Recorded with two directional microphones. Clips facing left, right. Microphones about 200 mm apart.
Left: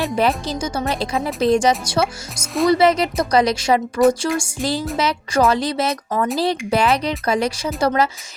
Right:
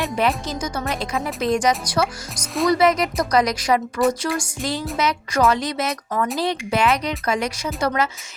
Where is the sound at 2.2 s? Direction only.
Centre (ahead or behind).